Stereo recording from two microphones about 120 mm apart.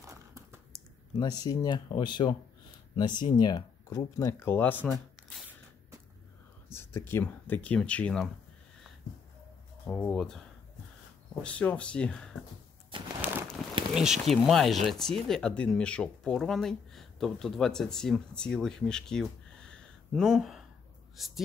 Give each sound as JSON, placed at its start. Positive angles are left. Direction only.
{"t": 0.0, "sound": "crumpling", "side_deg": -25}
{"t": 1.4, "sound": "speech", "side_deg": 35}
{"t": 6.7, "sound": "speech", "side_deg": 20}
{"t": 9.8, "sound": "speech", "side_deg": 5}
{"t": 11.4, "sound": "speech", "side_deg": 10}
{"t": 13.2, "sound": "crumpling", "side_deg": -20}
{"t": 13.9, "sound": "speech", "side_deg": -5}
{"t": 20.2, "sound": "speech", "side_deg": -5}